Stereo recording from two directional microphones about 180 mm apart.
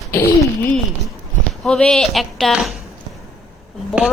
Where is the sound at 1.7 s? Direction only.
5° left (ahead or behind).